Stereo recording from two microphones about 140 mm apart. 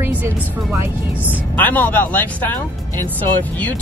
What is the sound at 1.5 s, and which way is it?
Speech, 15° left (ahead or behind).